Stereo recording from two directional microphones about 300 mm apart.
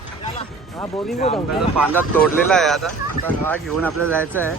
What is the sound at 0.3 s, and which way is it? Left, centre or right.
Music, centre.